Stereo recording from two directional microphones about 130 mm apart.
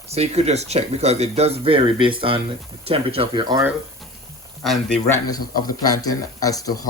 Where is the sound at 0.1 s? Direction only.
55° right (ahead or behind); by 3.6 s 35° right (ahead or behind).